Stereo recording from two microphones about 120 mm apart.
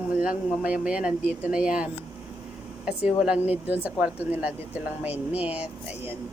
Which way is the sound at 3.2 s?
5° right (ahead or behind).